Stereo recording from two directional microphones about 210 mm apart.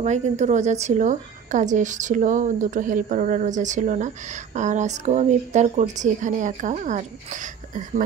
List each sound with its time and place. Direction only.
0.0 s a woman's voice: 35° right (ahead or behind)